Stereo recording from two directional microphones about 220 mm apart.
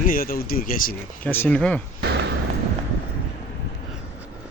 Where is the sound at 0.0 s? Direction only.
40° left (ahead or behind).